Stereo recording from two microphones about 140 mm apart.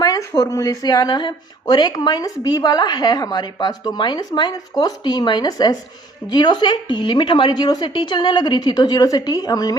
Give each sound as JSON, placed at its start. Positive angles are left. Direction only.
{"t": 0.0, "sound": "a woman's voice", "side_deg": 25}